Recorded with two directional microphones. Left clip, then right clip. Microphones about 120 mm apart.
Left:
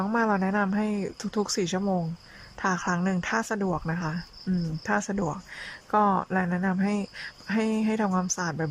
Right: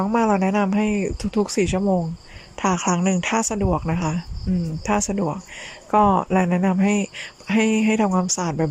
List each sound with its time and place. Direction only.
0.0 s speech: 20° right (ahead or behind)
2.6 s speech: 25° right (ahead or behind)
4.5 s speech: 10° right (ahead or behind)
4.9 s speech: 20° right (ahead or behind)